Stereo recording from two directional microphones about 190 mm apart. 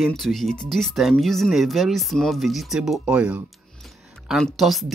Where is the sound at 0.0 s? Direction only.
Centre (ahead or behind).